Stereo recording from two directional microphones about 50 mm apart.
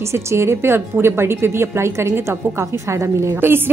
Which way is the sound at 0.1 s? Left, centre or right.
Right.